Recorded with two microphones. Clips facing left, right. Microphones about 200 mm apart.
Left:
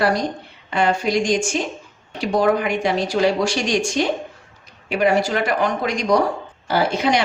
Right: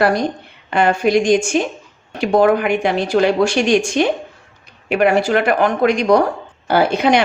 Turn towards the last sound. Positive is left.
turn(degrees=-60)  # may be behind; listen again after turning